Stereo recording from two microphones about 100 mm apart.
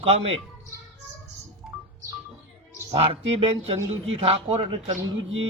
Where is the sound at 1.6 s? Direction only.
5° right (ahead or behind).